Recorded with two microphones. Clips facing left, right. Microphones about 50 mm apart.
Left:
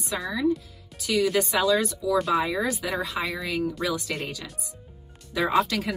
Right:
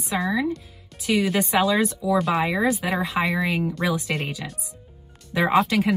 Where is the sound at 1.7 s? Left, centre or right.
Right.